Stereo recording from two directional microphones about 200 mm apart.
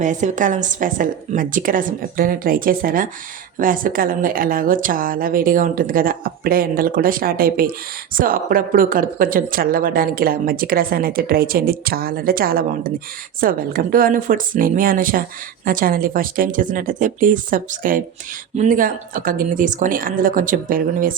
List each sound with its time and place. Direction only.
0.0 s speech: 40° right (ahead or behind)